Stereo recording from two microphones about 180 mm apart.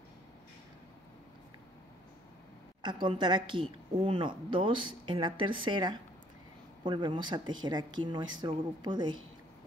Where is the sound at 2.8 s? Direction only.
25° right (ahead or behind).